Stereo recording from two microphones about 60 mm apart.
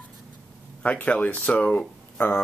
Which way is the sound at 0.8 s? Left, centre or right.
Left.